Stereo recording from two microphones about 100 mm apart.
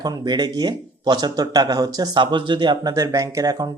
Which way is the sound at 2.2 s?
50° right (ahead or behind).